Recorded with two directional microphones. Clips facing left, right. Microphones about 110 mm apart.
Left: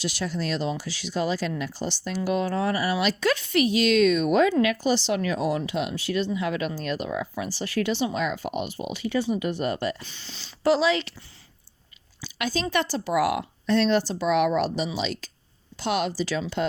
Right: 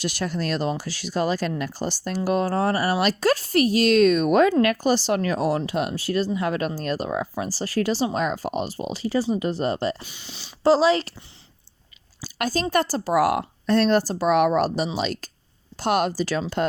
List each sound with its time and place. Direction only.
0.0 s speech: 50° right (ahead or behind); by 10.0 s 30° right (ahead or behind)
10.0 s speech: 15° right (ahead or behind)
10.6 s speech: 35° right (ahead or behind)
12.2 s a sound: 45° right (ahead or behind)
12.7 s speech: 40° right (ahead or behind)